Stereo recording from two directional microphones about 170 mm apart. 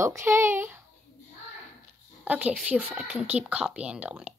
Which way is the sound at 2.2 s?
10° right (ahead or behind).